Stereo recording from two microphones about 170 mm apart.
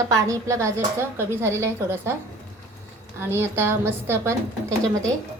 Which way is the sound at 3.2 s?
15° right (ahead or behind).